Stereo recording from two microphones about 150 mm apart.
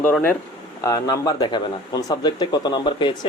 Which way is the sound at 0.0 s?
15° left (ahead or behind).